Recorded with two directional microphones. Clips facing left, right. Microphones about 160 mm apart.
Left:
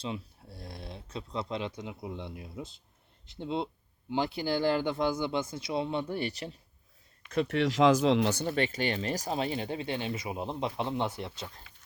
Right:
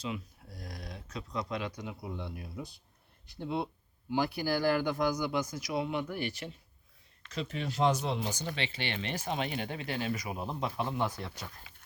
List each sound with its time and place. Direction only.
0.0 s speech: 30° left (ahead or behind)
7.3 s speech: 60° left (ahead or behind)
8.5 s speech: 45° left (ahead or behind); by 11.4 s 25° left (ahead or behind)